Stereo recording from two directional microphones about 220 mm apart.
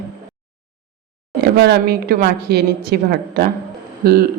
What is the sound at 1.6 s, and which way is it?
A man's voice, 45° right (ahead or behind).